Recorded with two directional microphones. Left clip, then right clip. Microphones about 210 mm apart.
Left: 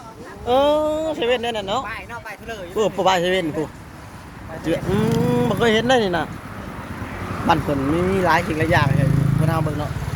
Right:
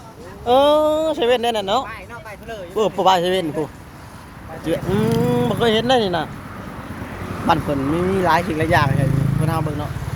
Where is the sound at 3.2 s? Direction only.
50° right (ahead or behind).